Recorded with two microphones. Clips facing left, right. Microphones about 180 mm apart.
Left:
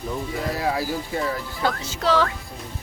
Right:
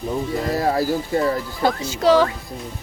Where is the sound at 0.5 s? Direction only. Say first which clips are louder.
Right 6 dB; 45° right (ahead or behind).